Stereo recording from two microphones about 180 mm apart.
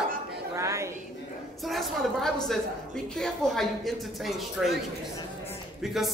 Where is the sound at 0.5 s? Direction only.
15° right (ahead or behind).